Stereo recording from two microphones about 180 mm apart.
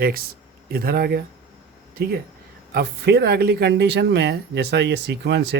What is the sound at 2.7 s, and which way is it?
Speech, 65° right (ahead or behind).